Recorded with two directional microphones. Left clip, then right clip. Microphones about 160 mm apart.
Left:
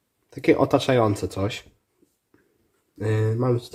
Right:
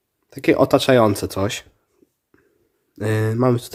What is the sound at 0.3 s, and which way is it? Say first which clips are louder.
Speech: right 4 dB; 25° right (ahead or behind).